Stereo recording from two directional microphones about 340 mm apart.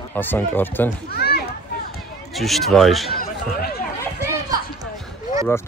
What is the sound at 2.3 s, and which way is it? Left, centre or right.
Speech, centre.